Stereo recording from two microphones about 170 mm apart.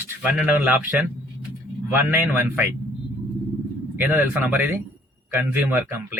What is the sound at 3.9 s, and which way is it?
Speech, 10° right (ahead or behind).